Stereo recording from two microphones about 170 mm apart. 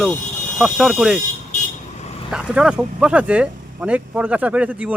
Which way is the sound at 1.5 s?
40° left (ahead or behind).